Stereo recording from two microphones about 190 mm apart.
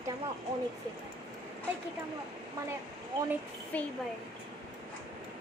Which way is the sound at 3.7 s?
10° left (ahead or behind).